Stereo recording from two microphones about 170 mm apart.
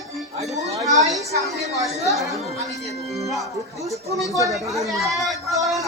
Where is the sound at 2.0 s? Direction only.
Centre (ahead or behind).